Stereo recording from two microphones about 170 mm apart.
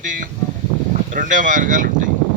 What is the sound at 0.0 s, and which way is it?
Speech, 50° right (ahead or behind).